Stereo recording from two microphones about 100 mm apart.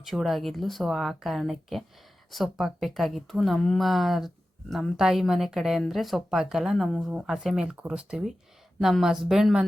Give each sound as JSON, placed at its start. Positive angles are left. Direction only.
{"t": 0.0, "sound": "speech", "side_deg": 0}